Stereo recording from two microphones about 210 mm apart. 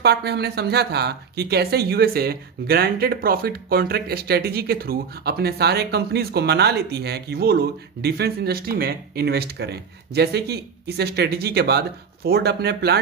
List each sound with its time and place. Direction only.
0.0 s speech: 50° right (ahead or behind)